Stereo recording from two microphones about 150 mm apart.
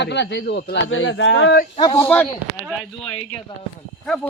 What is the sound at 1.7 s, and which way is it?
Speech, 30° left (ahead or behind).